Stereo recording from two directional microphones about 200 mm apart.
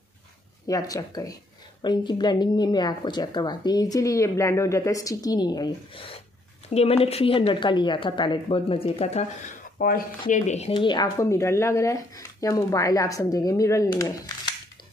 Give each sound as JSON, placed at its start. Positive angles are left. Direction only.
{"t": 0.7, "sound": "speech", "side_deg": 15}
{"t": 9.8, "sound": "speech", "side_deg": 45}